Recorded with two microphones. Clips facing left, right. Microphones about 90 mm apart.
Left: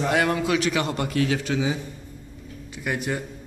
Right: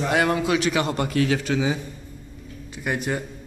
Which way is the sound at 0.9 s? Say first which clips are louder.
Right 2 dB; 55° right (ahead or behind).